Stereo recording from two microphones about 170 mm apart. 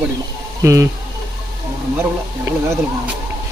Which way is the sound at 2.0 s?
15° right (ahead or behind).